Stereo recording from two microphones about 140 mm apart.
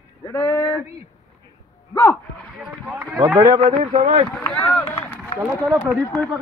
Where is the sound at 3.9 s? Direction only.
55° right (ahead or behind).